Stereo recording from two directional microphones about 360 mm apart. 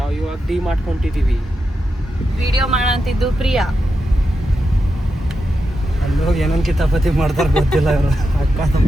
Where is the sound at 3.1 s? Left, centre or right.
Centre.